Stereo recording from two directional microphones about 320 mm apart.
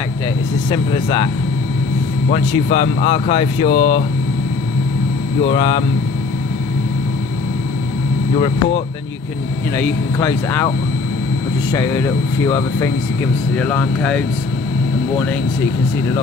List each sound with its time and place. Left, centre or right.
0.7 s speech: centre
5.4 s speech: centre
9.8 s speech: centre
11.7 s speech: centre